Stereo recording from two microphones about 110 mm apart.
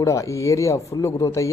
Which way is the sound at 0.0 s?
30° left (ahead or behind).